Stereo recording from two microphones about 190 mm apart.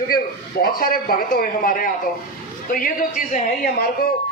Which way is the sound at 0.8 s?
50° left (ahead or behind).